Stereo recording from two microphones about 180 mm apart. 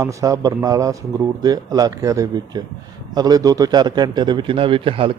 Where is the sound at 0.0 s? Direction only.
20° right (ahead or behind).